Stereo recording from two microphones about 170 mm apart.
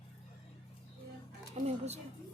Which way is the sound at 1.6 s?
40° right (ahead or behind).